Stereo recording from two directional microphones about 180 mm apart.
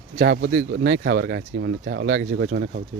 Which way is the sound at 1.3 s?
70° right (ahead or behind).